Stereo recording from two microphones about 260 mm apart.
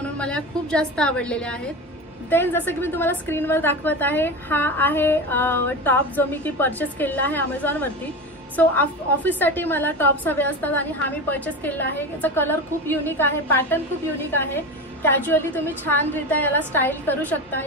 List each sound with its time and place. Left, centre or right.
0.0 s a woman's voice: centre